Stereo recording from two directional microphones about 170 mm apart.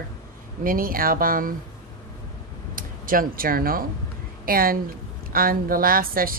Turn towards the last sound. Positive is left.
turn(degrees=-60)  # may be behind; listen again after turning